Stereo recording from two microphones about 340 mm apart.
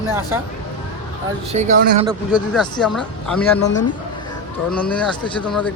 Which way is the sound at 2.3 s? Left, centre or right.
Centre.